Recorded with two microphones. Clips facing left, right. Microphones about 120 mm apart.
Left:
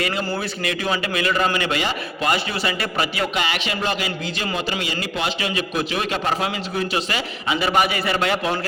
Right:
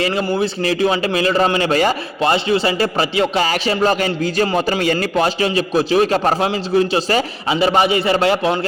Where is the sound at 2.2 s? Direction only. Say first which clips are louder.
Right 7 dB; 30° right (ahead or behind).